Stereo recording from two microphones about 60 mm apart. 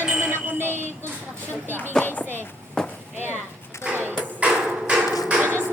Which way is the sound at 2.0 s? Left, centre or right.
Left.